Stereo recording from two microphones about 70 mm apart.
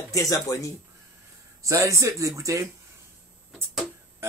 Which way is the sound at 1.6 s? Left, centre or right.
Right.